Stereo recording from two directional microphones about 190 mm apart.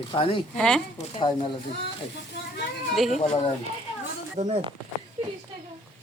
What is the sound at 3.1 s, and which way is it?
Speech, 30° left (ahead or behind).